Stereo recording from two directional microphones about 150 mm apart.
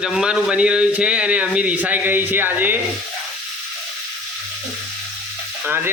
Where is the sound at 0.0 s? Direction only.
5° right (ahead or behind).